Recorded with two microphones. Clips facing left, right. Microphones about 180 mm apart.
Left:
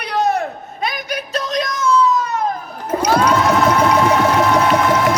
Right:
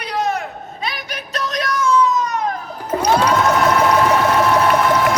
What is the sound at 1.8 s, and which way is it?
Baby cry, 20° right (ahead or behind).